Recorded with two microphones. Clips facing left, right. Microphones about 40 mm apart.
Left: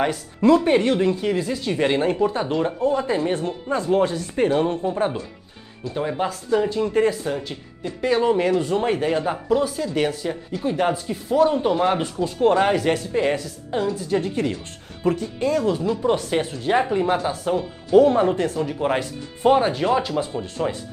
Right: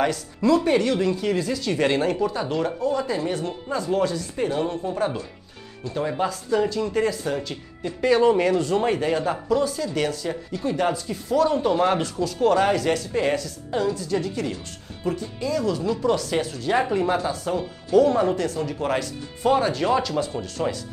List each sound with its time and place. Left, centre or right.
0.7 s speech: left
7.2 s speech: centre
11.7 s speech: centre
12.0 s speech: left
15.8 s speech: centre
16.1 s speech: left
20.6 s speech: centre